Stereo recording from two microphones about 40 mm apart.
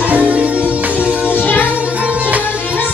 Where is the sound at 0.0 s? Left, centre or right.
Right.